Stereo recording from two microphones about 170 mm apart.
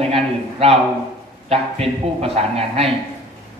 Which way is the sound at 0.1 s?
35° right (ahead or behind).